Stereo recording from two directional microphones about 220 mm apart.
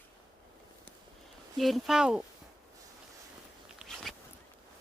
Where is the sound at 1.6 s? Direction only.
Centre (ahead or behind).